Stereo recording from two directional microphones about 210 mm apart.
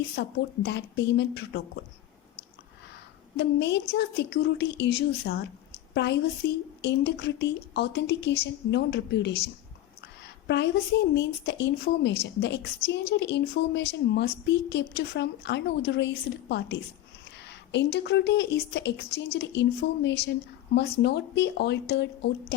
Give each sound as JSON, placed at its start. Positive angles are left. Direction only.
{"t": 0.2, "sound": "a woman's voice", "side_deg": 55}
{"t": 3.3, "sound": "a woman's voice", "side_deg": 55}
{"t": 10.0, "sound": "a sound", "side_deg": 55}
{"t": 11.1, "sound": "a woman's voice", "side_deg": 55}